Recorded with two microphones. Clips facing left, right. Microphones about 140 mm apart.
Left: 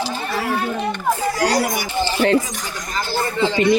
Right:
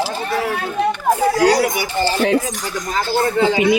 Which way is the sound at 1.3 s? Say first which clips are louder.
Right 4 dB; 65° right (ahead or behind).